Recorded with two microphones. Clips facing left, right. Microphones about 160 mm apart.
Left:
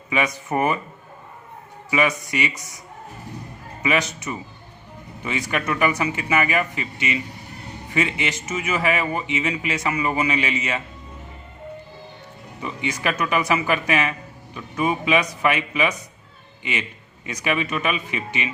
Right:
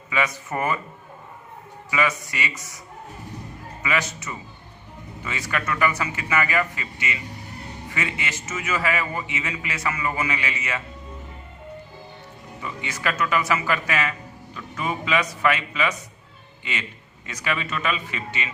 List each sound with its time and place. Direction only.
0.1 s speech: 20° left (ahead or behind)
1.9 s speech: 20° left (ahead or behind)
3.8 s speech: 20° left (ahead or behind)
12.6 s speech: 20° left (ahead or behind)
17.2 s a man's voice: 20° left (ahead or behind)